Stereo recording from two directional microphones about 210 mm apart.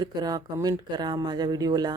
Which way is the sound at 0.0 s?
20° right (ahead or behind).